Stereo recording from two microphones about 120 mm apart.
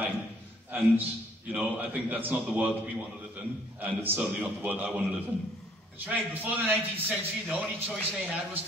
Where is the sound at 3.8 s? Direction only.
15° right (ahead or behind).